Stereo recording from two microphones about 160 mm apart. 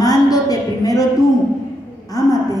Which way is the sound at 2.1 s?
20° left (ahead or behind).